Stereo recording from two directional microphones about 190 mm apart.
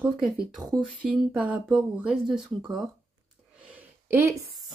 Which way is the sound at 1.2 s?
5° right (ahead or behind).